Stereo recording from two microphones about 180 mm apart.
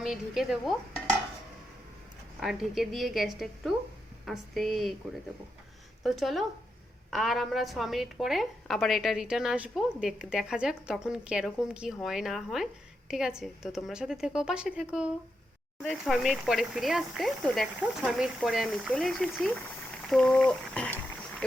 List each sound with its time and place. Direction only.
0.0 s a woman's voice: centre (ahead or behind)
2.4 s a woman's voice: centre (ahead or behind)
6.0 s a woman's voice: centre (ahead or behind)